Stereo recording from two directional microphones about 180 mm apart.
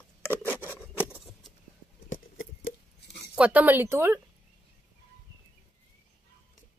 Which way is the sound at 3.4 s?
10° right (ahead or behind).